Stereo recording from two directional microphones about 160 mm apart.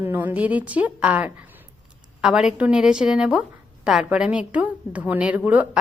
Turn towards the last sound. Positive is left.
turn(degrees=-10)  # may be behind; listen again after turning